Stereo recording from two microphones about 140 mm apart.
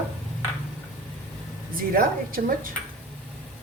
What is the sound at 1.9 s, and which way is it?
Speech, 90° right.